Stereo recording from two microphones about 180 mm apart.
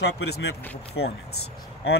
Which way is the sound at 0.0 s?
70° left (ahead or behind).